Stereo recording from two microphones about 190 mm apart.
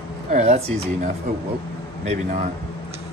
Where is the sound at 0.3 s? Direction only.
40° right (ahead or behind).